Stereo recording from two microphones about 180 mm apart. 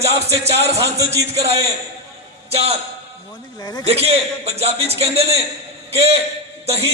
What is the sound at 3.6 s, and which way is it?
Speech, 20° left (ahead or behind).